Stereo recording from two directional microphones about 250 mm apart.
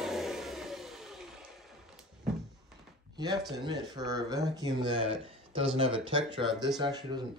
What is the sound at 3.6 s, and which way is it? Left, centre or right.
Speech, centre.